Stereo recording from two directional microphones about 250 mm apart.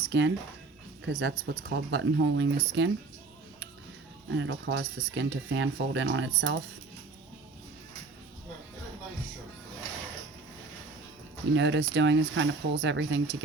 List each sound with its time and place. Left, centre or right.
0.0 s speech: right
4.3 s speech: right
11.5 s speech: right